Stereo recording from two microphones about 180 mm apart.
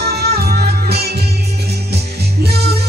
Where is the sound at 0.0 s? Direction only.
60° right (ahead or behind).